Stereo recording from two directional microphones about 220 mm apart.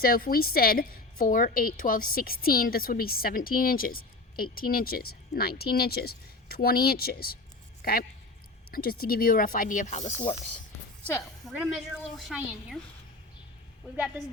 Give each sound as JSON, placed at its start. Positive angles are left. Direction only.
{"t": 0.0, "sound": "a woman's voice", "side_deg": 40}
{"t": 11.0, "sound": "a woman's voice", "side_deg": 5}